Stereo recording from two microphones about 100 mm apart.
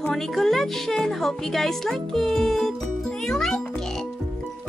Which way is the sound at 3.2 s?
5° left (ahead or behind).